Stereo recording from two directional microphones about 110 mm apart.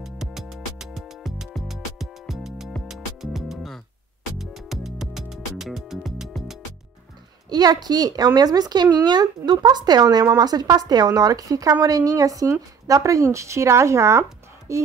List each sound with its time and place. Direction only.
0.0 s music: 5° right (ahead or behind)
7.4 s speech: 40° right (ahead or behind)